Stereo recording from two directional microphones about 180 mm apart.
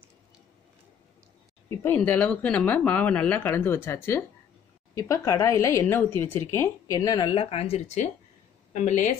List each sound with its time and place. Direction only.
1.8 s speech: 10° left (ahead or behind)
7.3 s speech: 30° left (ahead or behind)